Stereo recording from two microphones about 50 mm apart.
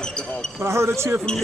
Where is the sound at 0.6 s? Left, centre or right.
Right.